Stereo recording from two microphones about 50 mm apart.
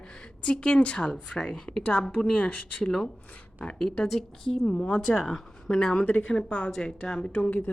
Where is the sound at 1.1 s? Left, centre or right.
Centre.